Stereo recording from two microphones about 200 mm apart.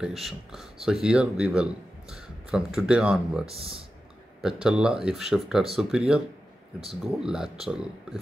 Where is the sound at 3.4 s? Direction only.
30° right (ahead or behind).